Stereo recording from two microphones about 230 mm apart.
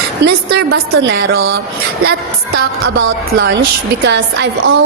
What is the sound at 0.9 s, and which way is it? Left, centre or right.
Speech, right.